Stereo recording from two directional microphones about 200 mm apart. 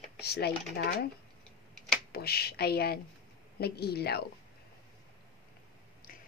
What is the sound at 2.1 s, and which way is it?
Speech, 50° left (ahead or behind).